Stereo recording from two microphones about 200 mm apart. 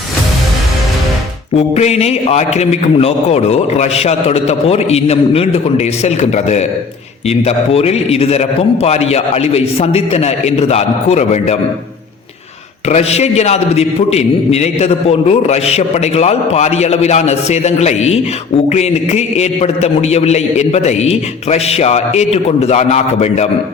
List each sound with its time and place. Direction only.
1.5 s a man's voice: 30° left (ahead or behind)
12.9 s a man's voice: 30° left (ahead or behind)